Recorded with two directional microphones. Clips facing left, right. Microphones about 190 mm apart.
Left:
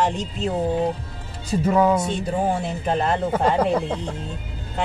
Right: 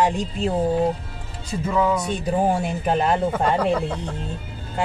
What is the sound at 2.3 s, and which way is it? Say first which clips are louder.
Speech: right 4 dB; 10° right (ahead or behind).